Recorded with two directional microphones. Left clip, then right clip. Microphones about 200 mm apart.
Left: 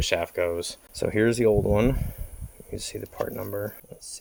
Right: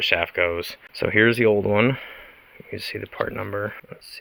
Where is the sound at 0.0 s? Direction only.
5° left (ahead or behind).